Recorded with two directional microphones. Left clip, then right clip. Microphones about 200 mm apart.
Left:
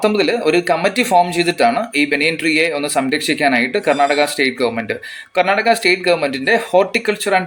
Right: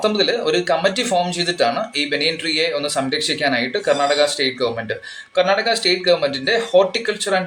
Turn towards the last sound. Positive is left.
turn(degrees=40)  # may be behind; listen again after turning